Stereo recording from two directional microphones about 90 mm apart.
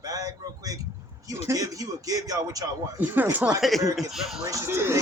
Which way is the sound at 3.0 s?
20° right (ahead or behind).